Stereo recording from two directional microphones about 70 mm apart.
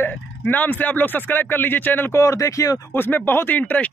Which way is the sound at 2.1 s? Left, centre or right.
Left.